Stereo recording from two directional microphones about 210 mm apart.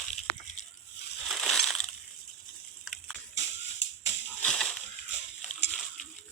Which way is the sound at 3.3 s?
60° left (ahead or behind).